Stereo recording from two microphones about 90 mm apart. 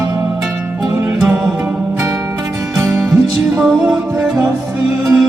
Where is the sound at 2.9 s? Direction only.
5° right (ahead or behind).